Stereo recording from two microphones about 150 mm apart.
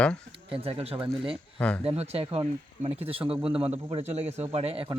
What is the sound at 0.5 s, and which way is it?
Speech, 40° right (ahead or behind).